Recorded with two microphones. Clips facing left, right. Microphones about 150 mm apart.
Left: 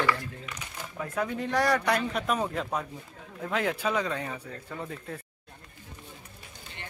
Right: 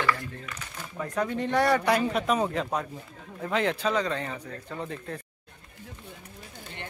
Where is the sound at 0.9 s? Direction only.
5° left (ahead or behind).